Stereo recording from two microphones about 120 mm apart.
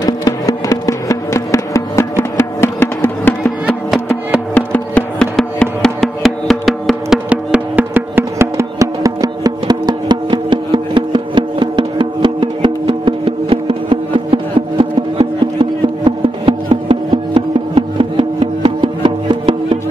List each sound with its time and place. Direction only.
0.0 s music: 30° left (ahead or behind)
3.6 s music: 5° right (ahead or behind)
4.6 s music: 10° left (ahead or behind)
7.2 s music: 10° right (ahead or behind); by 19.8 s 45° right (ahead or behind)